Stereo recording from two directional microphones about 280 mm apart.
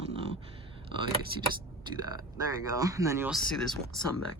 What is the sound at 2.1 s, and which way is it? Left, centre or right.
Speech, centre.